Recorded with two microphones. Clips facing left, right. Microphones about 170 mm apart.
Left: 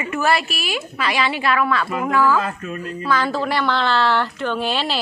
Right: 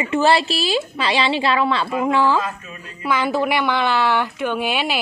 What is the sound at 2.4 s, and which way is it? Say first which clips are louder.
Speech: left 3 dB; 60° left (ahead or behind).